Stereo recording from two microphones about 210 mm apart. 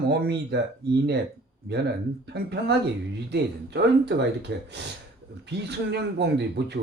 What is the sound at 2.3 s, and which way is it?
Speech, 50° right (ahead or behind).